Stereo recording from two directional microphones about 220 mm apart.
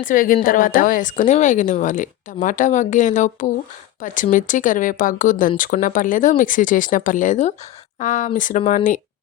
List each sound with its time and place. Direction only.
0.0 s speech: 40° left (ahead or behind)